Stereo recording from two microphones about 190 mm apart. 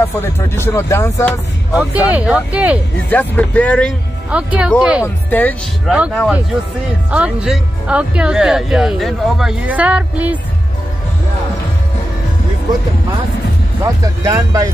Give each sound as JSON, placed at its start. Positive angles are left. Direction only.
{"t": 0.0, "sound": "speech", "side_deg": 10}
{"t": 1.8, "sound": "speech", "side_deg": -5}
{"t": 3.1, "sound": "speech", "side_deg": 10}
{"t": 4.3, "sound": "speech", "side_deg": -5}
{"t": 5.0, "sound": "speech", "side_deg": 10}
{"t": 5.9, "sound": "speech", "side_deg": -5}
{"t": 13.8, "sound": "speech", "side_deg": -20}